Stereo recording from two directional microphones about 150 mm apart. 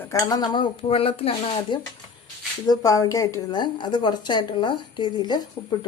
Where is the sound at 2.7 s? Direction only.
25° left (ahead or behind).